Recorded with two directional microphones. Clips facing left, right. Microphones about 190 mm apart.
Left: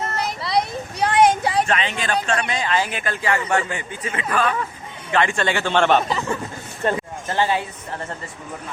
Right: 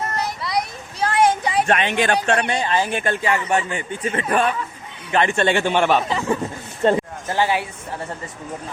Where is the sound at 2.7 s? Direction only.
20° right (ahead or behind).